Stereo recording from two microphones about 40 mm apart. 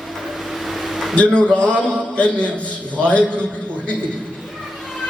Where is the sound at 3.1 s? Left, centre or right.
Left.